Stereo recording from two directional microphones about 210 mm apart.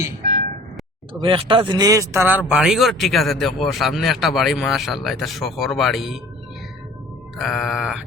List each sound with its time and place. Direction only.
1.2 s a man's voice: 25° right (ahead or behind); by 6.1 s centre (ahead or behind)
7.3 s speech: centre (ahead or behind)